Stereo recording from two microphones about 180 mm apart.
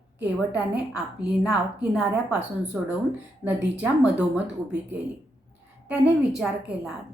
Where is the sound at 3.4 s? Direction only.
5° right (ahead or behind).